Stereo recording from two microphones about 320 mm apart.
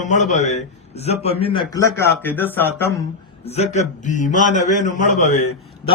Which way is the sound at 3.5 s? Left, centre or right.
Left.